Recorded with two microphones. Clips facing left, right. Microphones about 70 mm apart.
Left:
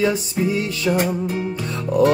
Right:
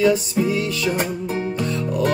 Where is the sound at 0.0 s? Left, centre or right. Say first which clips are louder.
Right 2 dB; left.